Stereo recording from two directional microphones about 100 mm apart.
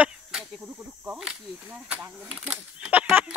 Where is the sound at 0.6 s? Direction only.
15° right (ahead or behind).